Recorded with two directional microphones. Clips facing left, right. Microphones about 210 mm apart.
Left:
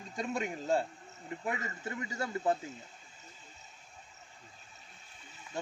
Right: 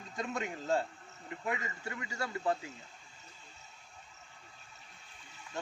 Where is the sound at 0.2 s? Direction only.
15° left (ahead or behind).